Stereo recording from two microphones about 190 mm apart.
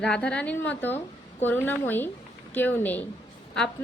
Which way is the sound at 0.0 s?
5° left (ahead or behind).